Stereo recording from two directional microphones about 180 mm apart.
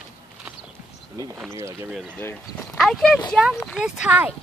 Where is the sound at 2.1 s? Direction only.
15° left (ahead or behind).